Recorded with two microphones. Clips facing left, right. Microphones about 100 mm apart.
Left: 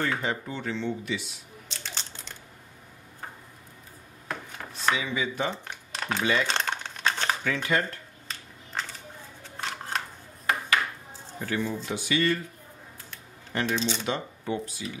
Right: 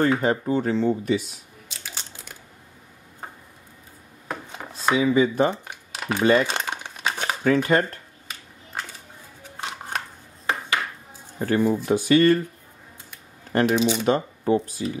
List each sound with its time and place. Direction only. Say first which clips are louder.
0.0 s speech: right 8 dB; 40° right (ahead or behind)
1.7 s crunch: even; 5° right (ahead or behind)
4.3 s a sound: right 3 dB; 15° right (ahead or behind)
4.9 s speech: right 10 dB; 40° right (ahead or behind)
5.7 s a sound: right 3 dB; 5° right (ahead or behind)
6.4 s crumpling: right 2 dB; 5° right (ahead or behind)
7.4 s speech: right 10 dB; 40° right (ahead or behind)
9.4 s scissors: right 2 dB; 15° right (ahead or behind)
11.3 s speech: right 9 dB; 45° right (ahead or behind)
13.5 s shuffling cards: right 8 dB; 45° right (ahead or behind)
13.7 s speech: right 8 dB; 10° right (ahead or behind)
14.0 s speech: right 9 dB; 45° right (ahead or behind)